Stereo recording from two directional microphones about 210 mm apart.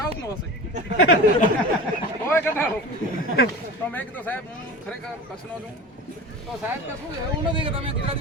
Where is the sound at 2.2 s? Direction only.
10° left (ahead or behind).